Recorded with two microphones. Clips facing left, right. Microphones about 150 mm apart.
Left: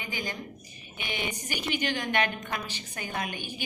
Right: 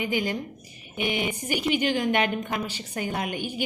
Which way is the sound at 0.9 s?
15° right (ahead or behind).